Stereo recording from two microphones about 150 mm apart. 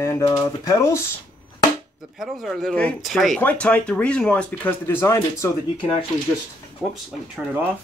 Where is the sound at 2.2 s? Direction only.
Centre (ahead or behind); by 5.5 s 20° left (ahead or behind).